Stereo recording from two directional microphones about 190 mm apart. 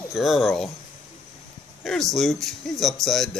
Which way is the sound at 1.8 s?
Centre (ahead or behind).